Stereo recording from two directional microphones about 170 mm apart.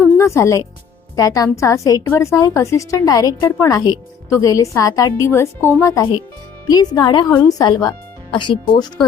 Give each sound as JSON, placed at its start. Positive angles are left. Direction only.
{"t": 0.0, "sound": "music", "side_deg": 15}
{"t": 1.1, "sound": "a woman's voice", "side_deg": 20}